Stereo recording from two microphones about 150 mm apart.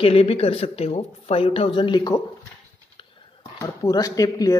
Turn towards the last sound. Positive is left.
turn(degrees=25)  # may be behind; listen again after turning